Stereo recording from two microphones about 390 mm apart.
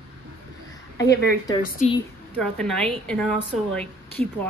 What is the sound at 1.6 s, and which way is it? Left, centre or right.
Speech, centre.